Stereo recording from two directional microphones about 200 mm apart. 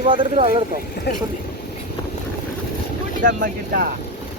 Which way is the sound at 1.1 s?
55° left (ahead or behind).